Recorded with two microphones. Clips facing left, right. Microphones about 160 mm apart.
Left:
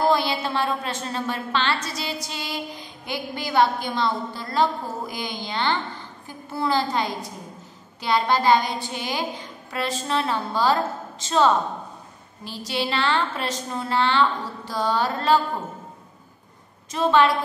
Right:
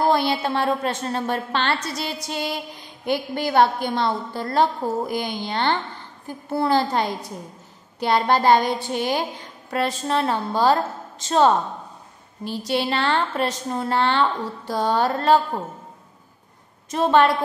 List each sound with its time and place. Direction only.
0.0 s a woman's voice: 55° right (ahead or behind)
16.9 s a woman's voice: 50° right (ahead or behind)